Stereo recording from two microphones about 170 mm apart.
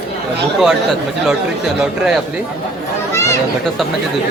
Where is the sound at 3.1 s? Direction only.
15° left (ahead or behind).